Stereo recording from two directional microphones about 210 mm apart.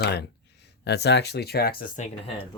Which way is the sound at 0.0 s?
50° left (ahead or behind).